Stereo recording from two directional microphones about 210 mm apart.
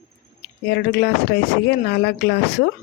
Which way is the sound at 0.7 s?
50° left (ahead or behind).